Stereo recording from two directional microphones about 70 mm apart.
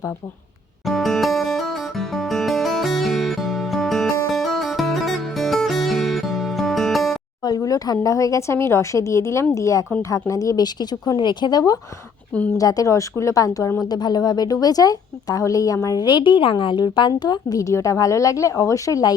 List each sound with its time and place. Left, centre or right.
0.9 s music: centre
7.4 s a sound: left
8.0 s a woman's voice: left
12.5 s speech: left
13.8 s a woman's voice: left
17.6 s a woman's voice: left